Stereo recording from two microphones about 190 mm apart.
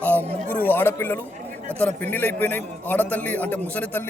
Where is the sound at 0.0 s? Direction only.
10° left (ahead or behind).